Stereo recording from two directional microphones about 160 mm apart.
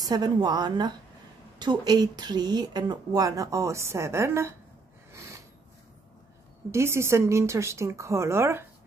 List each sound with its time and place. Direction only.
0.0 s a woman's voice: 25° right (ahead or behind)
5.1 s snort: 20° right (ahead or behind)
6.7 s speech: 15° right (ahead or behind)